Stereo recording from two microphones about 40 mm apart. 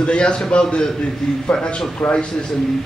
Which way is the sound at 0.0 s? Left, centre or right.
Left.